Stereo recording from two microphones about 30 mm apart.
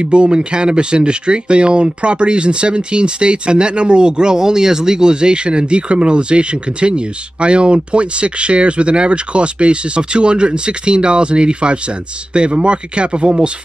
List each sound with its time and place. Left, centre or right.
0.0 s speech: right